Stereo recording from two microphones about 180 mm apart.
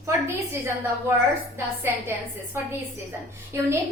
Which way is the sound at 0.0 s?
15° right (ahead or behind).